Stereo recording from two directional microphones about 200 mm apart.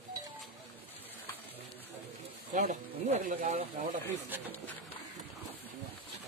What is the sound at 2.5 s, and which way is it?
Speech, 40° right (ahead or behind).